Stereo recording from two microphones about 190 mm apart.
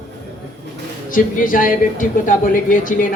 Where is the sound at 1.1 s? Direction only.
45° left (ahead or behind).